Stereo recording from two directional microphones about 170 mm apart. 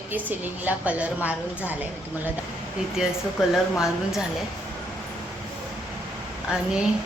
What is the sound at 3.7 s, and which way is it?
Speech, centre (ahead or behind).